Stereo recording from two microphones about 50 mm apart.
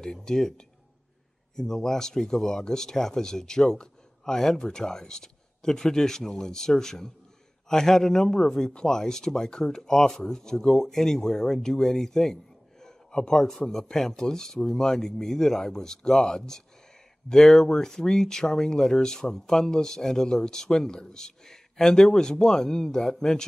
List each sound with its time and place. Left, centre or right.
0.0 s speech: centre
1.6 s speech: centre